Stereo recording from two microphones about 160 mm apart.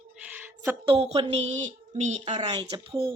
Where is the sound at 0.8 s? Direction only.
35° right (ahead or behind).